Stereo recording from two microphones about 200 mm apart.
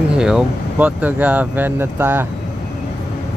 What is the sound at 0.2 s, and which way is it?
Speech, 5° right (ahead or behind).